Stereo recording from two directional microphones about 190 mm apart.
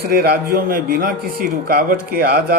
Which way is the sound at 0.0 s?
55° right (ahead or behind).